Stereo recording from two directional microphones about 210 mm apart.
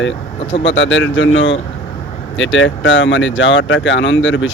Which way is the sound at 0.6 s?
60° left (ahead or behind).